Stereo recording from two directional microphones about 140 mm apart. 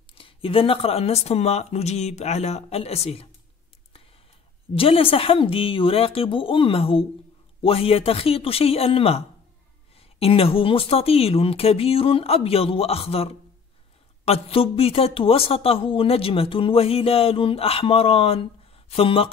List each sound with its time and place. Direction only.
0.1 s speech: 40° left (ahead or behind)
4.7 s speech: 40° left (ahead or behind)